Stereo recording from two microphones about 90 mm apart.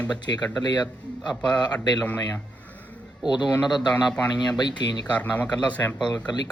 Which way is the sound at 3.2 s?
55° left (ahead or behind).